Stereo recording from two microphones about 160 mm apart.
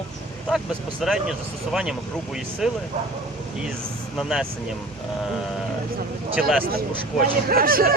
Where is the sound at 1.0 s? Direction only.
Centre (ahead or behind).